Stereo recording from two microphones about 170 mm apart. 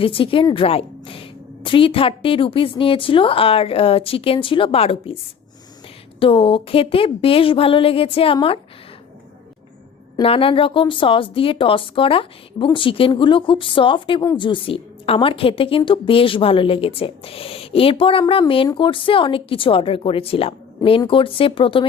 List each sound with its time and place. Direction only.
0.0 s a woman's voice: 30° left (ahead or behind)
6.1 s a woman's voice: 30° left (ahead or behind)
10.2 s a woman's voice: 35° left (ahead or behind)